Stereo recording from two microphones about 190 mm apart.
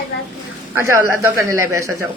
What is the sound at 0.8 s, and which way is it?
A woman's voice, 15° right (ahead or behind).